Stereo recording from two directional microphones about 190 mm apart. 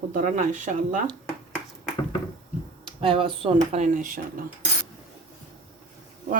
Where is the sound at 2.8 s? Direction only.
30° right (ahead or behind); by 4.2 s 45° right (ahead or behind).